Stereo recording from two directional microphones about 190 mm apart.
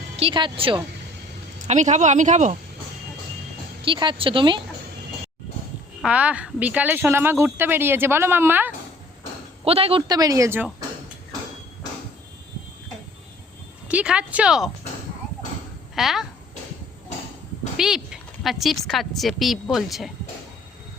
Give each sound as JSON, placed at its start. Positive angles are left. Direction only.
{"t": 0.2, "sound": "speech", "side_deg": -25}
{"t": 1.6, "sound": "speech", "side_deg": -40}
{"t": 3.8, "sound": "speech", "side_deg": -25}
{"t": 6.0, "sound": "a woman's voice", "side_deg": -5}
{"t": 9.6, "sound": "speech", "side_deg": -30}
{"t": 13.8, "sound": "speech", "side_deg": -5}
{"t": 16.0, "sound": "speech", "side_deg": 0}
{"t": 17.7, "sound": "a woman's voice", "side_deg": -5}